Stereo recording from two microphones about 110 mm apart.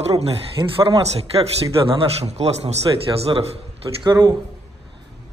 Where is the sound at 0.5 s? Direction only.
55° right (ahead or behind).